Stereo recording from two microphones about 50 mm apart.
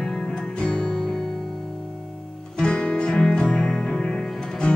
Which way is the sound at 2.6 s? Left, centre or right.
Centre.